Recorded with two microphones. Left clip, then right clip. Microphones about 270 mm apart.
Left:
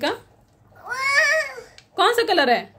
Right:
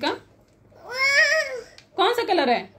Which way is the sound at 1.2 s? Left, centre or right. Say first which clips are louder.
Even; left.